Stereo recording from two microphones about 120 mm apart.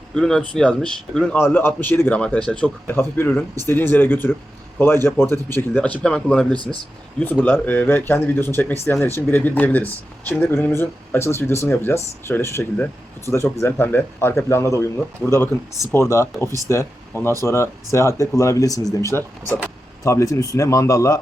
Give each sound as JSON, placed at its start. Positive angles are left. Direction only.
{"t": 0.1, "sound": "speech", "side_deg": 5}
{"t": 1.4, "sound": "speech", "side_deg": 20}
{"t": 2.8, "sound": "speech", "side_deg": 20}